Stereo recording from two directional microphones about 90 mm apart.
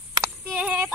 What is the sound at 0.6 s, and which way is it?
Female singing, 15° right (ahead or behind).